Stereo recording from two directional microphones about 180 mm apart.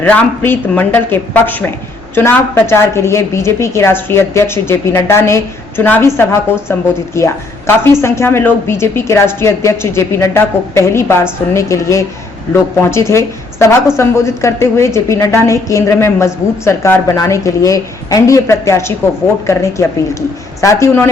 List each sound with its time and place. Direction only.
0.0 s a woman's voice: 10° left (ahead or behind)